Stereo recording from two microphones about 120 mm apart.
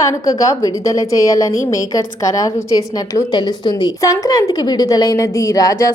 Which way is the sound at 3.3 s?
40° left (ahead or behind).